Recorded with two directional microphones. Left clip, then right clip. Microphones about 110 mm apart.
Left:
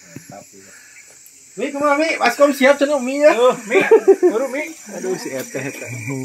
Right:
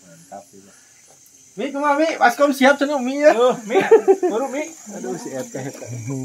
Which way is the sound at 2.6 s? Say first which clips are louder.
Left 2 dB; 70° left (ahead or behind).